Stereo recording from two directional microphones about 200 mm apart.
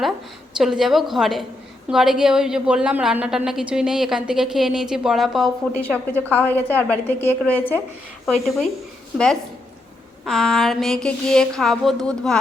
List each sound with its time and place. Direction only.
0.5 s a woman's voice: centre (ahead or behind)
9.1 s a woman's voice: 5° left (ahead or behind)